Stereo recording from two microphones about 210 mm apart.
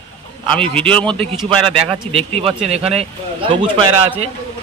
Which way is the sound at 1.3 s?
25° right (ahead or behind).